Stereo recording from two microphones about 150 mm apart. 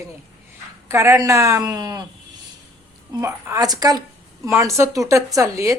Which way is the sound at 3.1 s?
20° right (ahead or behind).